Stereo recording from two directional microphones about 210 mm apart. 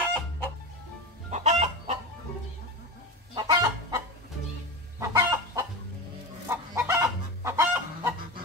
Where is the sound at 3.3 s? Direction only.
20° right (ahead or behind).